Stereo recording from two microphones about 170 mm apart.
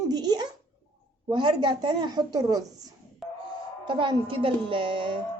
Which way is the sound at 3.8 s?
30° right (ahead or behind).